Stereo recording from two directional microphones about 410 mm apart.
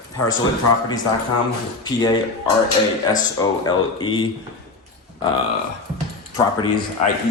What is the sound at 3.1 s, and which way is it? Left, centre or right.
Speech, centre.